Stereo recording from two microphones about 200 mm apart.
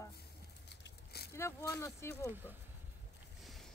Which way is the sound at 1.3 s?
15° left (ahead or behind).